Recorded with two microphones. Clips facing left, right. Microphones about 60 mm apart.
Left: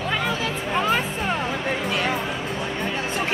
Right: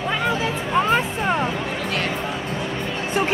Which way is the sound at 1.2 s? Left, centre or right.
Centre.